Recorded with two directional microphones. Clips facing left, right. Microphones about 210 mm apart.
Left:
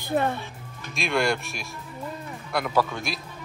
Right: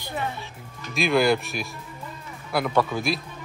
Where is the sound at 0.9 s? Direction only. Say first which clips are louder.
Right 4 dB; centre (ahead or behind).